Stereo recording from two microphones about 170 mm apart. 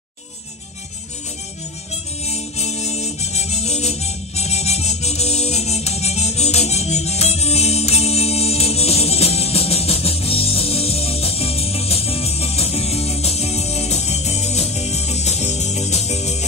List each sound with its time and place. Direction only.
2.2 s music: 40° left (ahead or behind)